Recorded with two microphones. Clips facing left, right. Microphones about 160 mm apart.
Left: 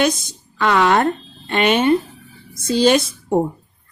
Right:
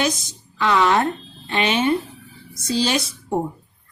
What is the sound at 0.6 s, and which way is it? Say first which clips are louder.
A woman's voice: left 2 dB; 55° left (ahead or behind).